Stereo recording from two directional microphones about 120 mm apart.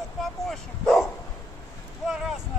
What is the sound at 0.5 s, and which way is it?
Bow-wow, 5° left (ahead or behind).